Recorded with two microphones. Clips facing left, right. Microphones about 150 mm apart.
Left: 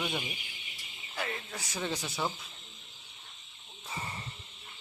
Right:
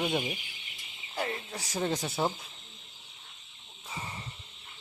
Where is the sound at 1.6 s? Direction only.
40° right (ahead or behind).